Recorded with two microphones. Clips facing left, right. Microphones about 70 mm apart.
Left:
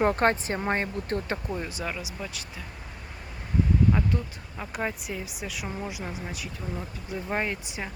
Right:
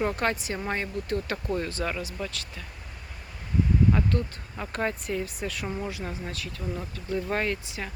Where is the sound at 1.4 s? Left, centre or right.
Centre.